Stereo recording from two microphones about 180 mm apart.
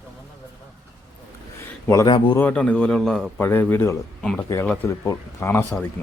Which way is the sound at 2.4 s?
10° left (ahead or behind).